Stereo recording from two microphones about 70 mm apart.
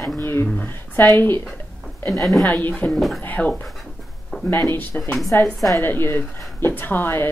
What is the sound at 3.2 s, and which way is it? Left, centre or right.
Speech, left.